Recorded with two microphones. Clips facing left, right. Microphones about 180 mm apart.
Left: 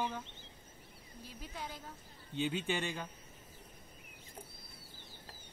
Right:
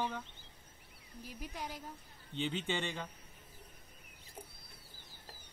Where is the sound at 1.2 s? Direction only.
10° right (ahead or behind).